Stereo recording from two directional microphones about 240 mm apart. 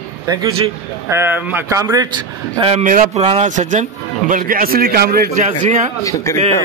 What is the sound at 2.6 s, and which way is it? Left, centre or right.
A man's voice, right.